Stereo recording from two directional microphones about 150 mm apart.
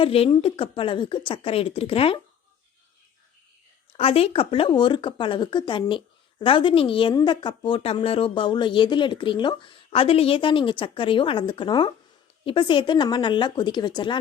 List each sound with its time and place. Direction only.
0.0 s a woman's voice: 35° left (ahead or behind)
3.9 s a woman's voice: 40° left (ahead or behind)